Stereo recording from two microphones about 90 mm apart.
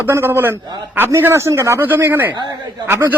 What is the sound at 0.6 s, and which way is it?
Speech, 55° right (ahead or behind).